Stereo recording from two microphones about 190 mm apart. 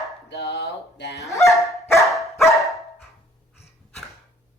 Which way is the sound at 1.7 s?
15° left (ahead or behind).